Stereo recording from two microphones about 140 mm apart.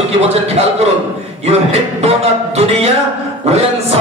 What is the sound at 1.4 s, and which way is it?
Speech, 50° right (ahead or behind).